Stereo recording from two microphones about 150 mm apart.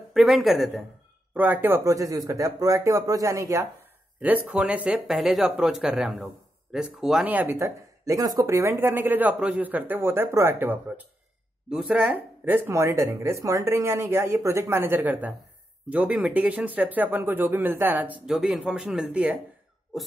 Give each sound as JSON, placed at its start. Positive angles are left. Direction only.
{"t": 0.1, "sound": "speech", "side_deg": 0}
{"t": 1.3, "sound": "speech", "side_deg": -10}
{"t": 4.2, "sound": "speech", "side_deg": -10}